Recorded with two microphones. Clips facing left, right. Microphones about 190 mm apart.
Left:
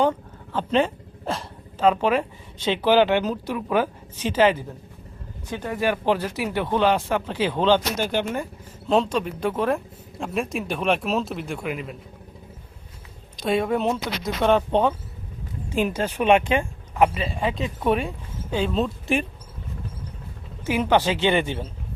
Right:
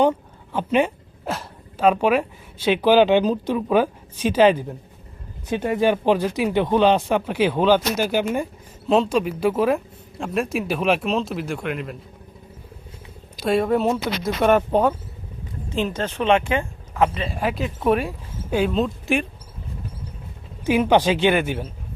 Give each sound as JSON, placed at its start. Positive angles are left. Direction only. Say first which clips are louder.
{"t": 0.0, "sound": "a sound", "louder": "right 3 dB", "side_deg": -15}
{"t": 1.8, "sound": "speech", "louder": "right 2 dB", "side_deg": -15}
{"t": 13.4, "sound": "speech", "louder": "right 3 dB", "side_deg": 0}
{"t": 15.7, "sound": "speech", "louder": "left 1 dB", "side_deg": 10}
{"t": 17.2, "sound": "speech", "louder": "right 1 dB", "side_deg": -5}
{"t": 20.7, "sound": "speech", "louder": "right 3 dB", "side_deg": -15}